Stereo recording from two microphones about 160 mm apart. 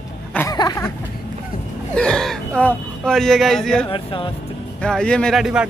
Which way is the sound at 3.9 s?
30° left (ahead or behind).